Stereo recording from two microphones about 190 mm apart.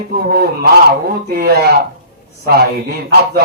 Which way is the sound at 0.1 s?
55° right (ahead or behind).